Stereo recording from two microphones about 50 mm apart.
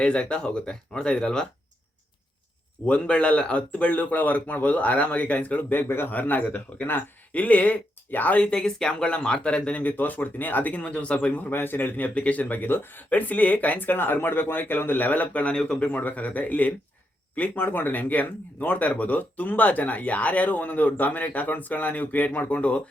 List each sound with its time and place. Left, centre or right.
0.0 s speech: left
2.8 s speech: left
5.9 s a man's voice: left
6.1 s speech: left
8.4 s speech: centre
9.8 s speech: left
11.5 s speech: left
13.1 s speech: left
15.5 s speech: centre
15.9 s speech: left